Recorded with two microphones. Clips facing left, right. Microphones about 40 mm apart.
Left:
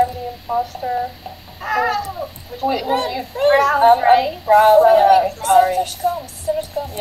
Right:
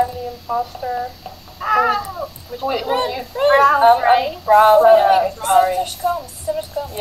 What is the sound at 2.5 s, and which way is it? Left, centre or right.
A woman's voice, centre.